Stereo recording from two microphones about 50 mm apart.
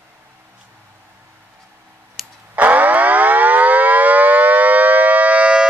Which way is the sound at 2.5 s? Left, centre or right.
Right.